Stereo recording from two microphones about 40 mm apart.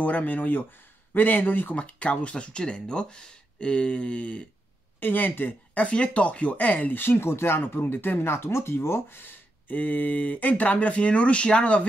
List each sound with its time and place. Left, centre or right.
0.0 s speech: left
1.8 s speech: left
5.0 s speech: left
5.8 s speech: left
7.0 s speech: left
8.2 s speech: left